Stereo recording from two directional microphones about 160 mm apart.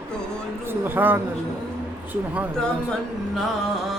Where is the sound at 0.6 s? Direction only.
15° right (ahead or behind).